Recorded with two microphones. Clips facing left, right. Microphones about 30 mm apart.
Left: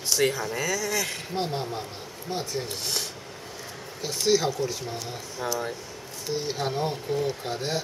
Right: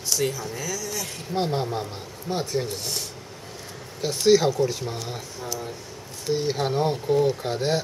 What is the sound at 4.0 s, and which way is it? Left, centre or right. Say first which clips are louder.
Speech: right 5 dB; centre.